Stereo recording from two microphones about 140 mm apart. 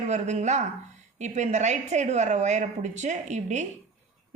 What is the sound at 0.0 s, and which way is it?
A woman's voice, 55° right (ahead or behind).